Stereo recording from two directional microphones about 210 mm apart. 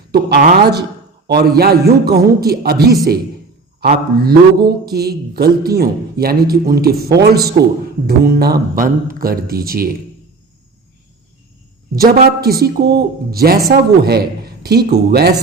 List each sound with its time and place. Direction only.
0.1 s a man's voice: 50° right (ahead or behind)
11.9 s a man's voice: 45° right (ahead or behind)